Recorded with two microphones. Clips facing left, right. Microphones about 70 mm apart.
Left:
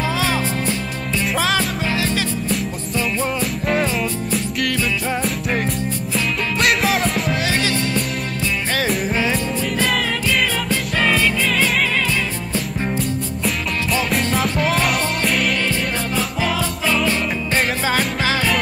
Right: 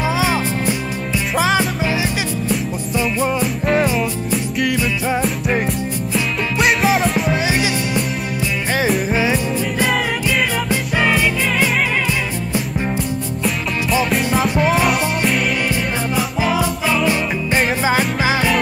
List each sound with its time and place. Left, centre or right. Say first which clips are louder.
0.0 s music: right 2 dB; centre
6.1 s music: right 2 dB; centre
7.4 s music: right 1 dB; centre
8.7 s music: right 4 dB; centre
9.1 s music: right 2 dB; centre
13.4 s music: right 3 dB; centre
15.7 s music: right 2 dB; centre